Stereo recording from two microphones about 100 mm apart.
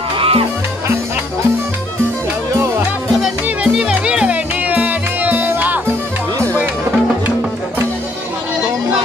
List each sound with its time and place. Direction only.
0.2 s music: 65° right (ahead or behind)
3.2 s music: 5° right (ahead or behind)